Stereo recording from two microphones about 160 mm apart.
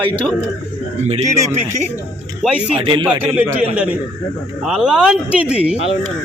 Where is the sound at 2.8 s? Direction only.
30° right (ahead or behind).